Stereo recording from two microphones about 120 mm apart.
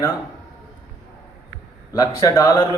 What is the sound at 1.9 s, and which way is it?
Speech, 30° left (ahead or behind).